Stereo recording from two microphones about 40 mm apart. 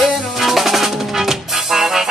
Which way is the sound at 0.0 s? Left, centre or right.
Centre.